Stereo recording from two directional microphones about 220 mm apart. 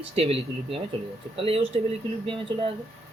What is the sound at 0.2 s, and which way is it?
Speech, 25° right (ahead or behind).